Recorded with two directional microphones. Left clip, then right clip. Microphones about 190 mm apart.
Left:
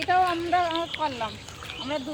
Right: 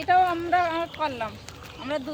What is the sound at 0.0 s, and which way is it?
Speech, 5° right (ahead or behind).